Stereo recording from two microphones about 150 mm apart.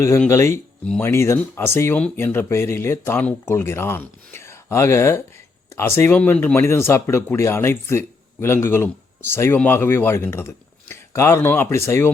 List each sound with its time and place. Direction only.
0.3 s speech: 20° left (ahead or behind)